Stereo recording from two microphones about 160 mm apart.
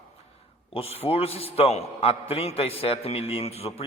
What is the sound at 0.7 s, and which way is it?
A man's voice, 40° left (ahead or behind).